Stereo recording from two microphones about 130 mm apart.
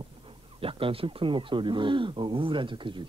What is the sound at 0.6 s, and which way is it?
Speech, 45° right (ahead or behind).